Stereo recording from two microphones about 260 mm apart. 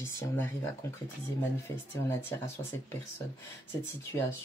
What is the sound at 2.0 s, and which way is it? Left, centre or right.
Speech, centre.